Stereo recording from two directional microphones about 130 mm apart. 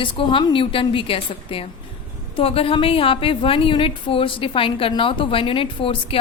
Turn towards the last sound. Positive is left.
turn(degrees=45)  # may be behind; listen again after turning